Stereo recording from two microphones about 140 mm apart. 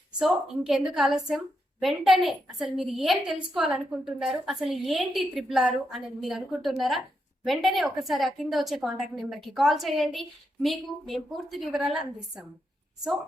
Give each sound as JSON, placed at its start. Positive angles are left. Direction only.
{"t": 0.2, "sound": "a woman's voice", "side_deg": -5}